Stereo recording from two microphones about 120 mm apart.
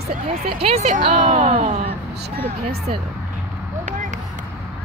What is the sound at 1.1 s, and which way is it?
Speech, 90° right.